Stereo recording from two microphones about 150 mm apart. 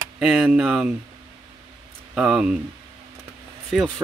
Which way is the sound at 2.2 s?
5° right (ahead or behind).